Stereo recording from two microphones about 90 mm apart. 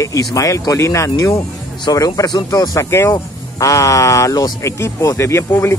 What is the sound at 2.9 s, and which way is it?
Speech, 30° left (ahead or behind).